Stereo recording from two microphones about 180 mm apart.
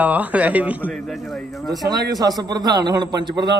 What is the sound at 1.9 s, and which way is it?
A man's voice, 20° right (ahead or behind).